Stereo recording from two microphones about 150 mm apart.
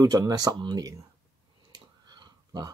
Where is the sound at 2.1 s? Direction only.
25° right (ahead or behind).